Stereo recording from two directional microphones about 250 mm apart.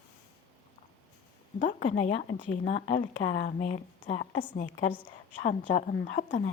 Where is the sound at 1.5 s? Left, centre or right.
Left.